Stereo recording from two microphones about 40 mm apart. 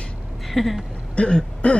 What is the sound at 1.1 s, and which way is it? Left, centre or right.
Throat clearing, left.